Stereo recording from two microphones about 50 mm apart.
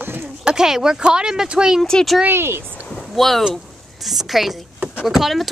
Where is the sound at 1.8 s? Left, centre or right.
Centre.